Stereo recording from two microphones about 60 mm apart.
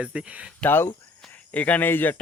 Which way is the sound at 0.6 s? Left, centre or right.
Centre.